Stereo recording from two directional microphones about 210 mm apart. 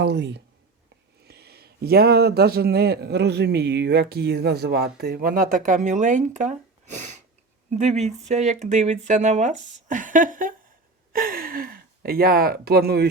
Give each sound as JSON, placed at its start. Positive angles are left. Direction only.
{"t": 0.0, "sound": "speech", "side_deg": -55}